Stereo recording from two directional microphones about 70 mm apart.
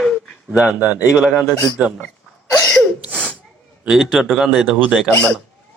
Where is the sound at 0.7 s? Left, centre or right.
Centre.